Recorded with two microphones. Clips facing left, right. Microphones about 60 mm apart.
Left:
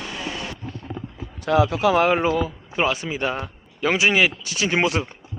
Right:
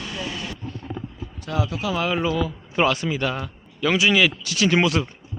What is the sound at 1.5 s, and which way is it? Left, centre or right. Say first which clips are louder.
Speech: left 8 dB; left.